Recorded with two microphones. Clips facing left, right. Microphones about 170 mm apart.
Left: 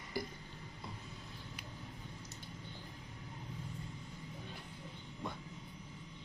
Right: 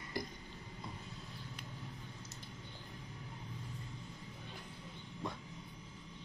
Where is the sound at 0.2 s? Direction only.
Centre (ahead or behind).